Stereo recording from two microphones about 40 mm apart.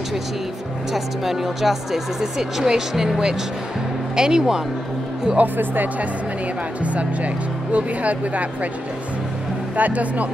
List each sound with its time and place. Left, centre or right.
0.9 s speech: centre
5.4 s speech: right
6.8 s speech: right
9.8 s speech: right